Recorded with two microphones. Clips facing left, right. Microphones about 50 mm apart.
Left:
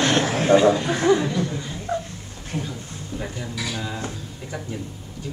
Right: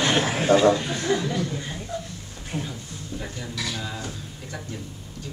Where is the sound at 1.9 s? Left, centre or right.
Left.